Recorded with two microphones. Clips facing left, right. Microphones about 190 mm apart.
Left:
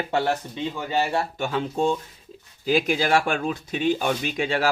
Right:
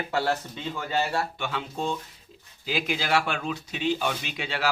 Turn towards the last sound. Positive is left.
turn(degrees=45)  # may be behind; listen again after turning